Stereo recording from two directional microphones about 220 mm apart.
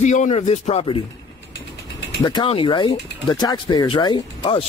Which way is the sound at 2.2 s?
20° left (ahead or behind).